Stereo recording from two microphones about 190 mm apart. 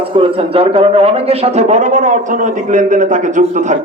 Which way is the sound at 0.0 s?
30° right (ahead or behind).